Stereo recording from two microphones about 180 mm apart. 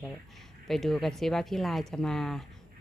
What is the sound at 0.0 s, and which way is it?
Speech, 5° left (ahead or behind).